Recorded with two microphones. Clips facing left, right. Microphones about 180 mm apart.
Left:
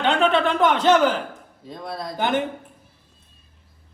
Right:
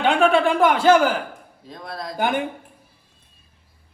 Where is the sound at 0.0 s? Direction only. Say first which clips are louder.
Right 2 dB; 10° right (ahead or behind).